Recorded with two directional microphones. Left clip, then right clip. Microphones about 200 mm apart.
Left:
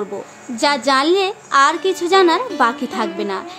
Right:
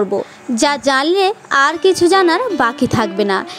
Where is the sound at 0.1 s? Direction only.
30° right (ahead or behind).